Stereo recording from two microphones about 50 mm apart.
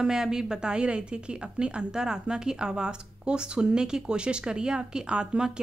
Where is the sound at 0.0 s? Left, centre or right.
Centre.